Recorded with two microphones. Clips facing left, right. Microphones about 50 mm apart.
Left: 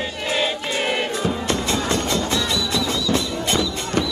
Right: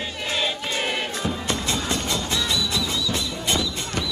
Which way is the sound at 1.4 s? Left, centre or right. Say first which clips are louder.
Left 4 dB; left.